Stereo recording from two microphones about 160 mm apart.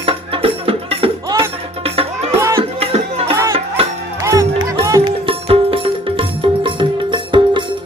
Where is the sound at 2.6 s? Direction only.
40° right (ahead or behind).